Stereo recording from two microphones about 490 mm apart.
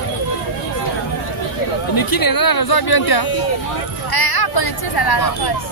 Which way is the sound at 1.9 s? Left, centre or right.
Left.